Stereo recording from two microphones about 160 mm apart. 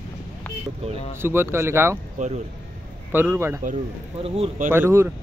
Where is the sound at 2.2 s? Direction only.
50° right (ahead or behind).